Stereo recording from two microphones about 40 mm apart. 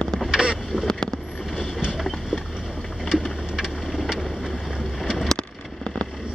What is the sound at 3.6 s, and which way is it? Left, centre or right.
Vehicle, centre.